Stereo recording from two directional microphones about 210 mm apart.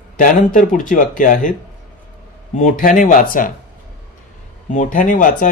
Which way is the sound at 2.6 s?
40° left (ahead or behind).